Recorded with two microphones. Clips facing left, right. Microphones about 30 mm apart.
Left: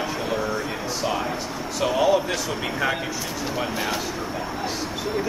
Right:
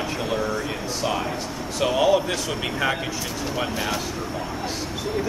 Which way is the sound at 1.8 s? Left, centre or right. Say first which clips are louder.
Right 1 dB; centre.